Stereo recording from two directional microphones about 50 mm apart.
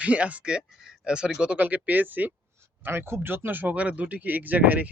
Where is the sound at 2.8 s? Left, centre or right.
Right.